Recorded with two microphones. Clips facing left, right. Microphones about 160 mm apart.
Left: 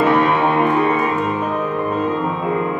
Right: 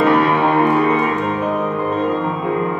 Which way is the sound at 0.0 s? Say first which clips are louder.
Right 1 dB; centre (ahead or behind).